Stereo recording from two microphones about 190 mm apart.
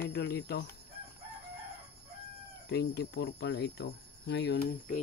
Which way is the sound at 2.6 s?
60° left (ahead or behind).